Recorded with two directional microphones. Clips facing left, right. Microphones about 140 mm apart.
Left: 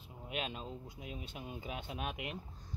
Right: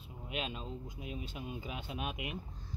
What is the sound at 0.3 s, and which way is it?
Speech, 45° left (ahead or behind).